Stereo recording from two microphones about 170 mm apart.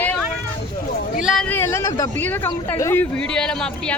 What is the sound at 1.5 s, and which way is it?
Speech, 15° left (ahead or behind).